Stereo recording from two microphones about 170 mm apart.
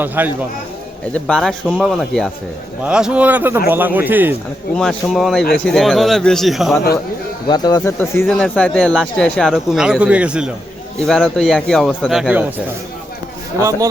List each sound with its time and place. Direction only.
0.0 s speech: 10° right (ahead or behind)
1.1 s speech: 5° left (ahead or behind); by 4.4 s 10° right (ahead or behind)
4.7 s speech: 5° left (ahead or behind)
7.4 s speech: 25° left (ahead or behind)
8.3 s speech: 5° left (ahead or behind)
13.6 s speech: 20° right (ahead or behind)